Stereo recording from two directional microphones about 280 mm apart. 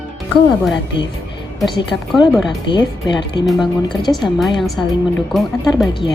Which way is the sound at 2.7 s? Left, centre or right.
Centre.